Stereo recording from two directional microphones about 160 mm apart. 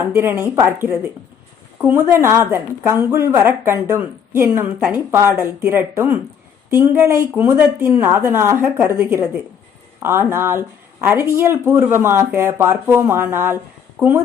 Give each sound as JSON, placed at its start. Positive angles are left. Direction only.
{"t": 0.0, "sound": "speech", "side_deg": -15}